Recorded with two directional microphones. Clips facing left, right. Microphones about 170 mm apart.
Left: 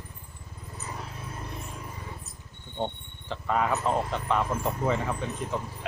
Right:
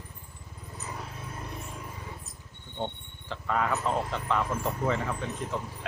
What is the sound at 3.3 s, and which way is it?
Speech, 20° left (ahead or behind).